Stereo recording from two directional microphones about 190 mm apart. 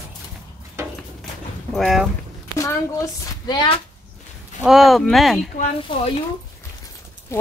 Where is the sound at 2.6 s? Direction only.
20° left (ahead or behind).